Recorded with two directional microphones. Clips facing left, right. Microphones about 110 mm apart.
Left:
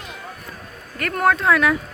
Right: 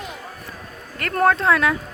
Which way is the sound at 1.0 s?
30° right (ahead or behind).